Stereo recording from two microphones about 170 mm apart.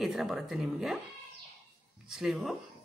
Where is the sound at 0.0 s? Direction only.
Centre (ahead or behind).